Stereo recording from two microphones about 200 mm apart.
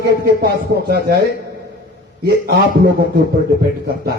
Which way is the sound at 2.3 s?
55° right (ahead or behind).